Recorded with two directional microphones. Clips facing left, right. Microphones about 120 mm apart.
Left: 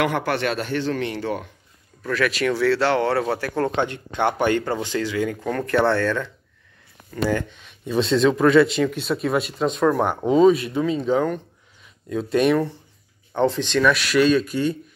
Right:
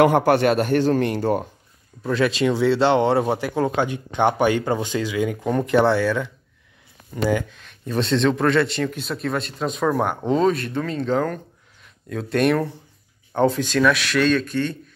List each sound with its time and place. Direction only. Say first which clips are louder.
0.0 s a man's voice: right 6 dB; 45° right (ahead or behind)
2.0 s speech: right 2 dB; 25° right (ahead or behind)
7.4 s speech: left 1 dB; centre (ahead or behind)